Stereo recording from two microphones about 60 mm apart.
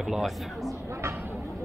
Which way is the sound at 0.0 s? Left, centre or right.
Centre.